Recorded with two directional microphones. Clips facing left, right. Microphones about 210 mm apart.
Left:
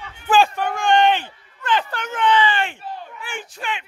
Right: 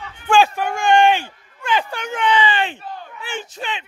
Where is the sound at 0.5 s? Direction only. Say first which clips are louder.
Right 2 dB; 10° right (ahead or behind).